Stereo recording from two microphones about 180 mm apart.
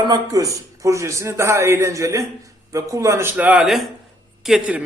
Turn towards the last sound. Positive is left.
turn(degrees=-5)  # may be behind; listen again after turning